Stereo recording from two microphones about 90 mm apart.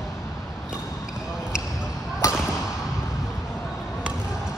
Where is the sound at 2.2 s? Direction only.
35° left (ahead or behind).